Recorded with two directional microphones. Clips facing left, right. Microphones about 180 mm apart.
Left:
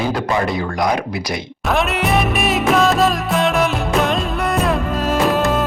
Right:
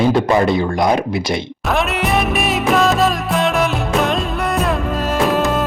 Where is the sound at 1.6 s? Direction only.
Centre (ahead or behind).